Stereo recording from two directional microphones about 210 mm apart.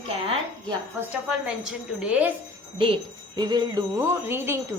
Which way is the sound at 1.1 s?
5° right (ahead or behind).